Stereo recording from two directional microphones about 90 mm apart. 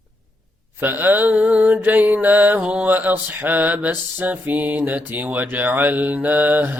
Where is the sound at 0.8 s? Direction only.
20° right (ahead or behind).